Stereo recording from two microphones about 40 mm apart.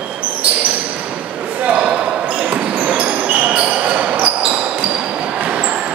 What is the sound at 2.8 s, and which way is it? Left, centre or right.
Basketball bounce, right.